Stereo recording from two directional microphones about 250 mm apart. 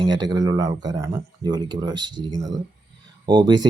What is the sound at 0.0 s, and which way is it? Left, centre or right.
Speech, centre.